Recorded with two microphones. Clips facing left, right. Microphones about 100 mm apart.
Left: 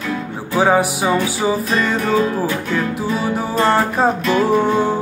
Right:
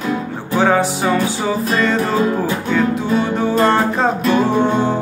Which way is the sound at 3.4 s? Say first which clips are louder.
Right 1 dB; 5° left (ahead or behind).